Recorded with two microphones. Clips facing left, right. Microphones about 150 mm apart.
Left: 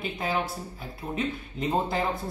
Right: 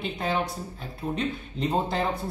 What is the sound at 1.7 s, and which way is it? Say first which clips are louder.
Speech: even; centre (ahead or behind).